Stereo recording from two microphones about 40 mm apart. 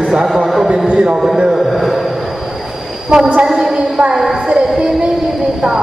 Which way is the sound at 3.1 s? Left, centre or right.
Centre.